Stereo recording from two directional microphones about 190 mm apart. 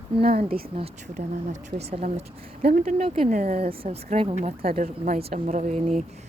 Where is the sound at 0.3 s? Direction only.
30° right (ahead or behind).